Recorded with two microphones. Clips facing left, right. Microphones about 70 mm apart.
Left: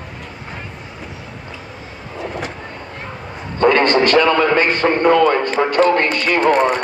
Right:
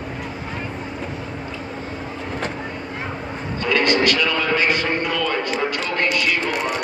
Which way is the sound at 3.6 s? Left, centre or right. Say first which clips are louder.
Left 6 dB; left.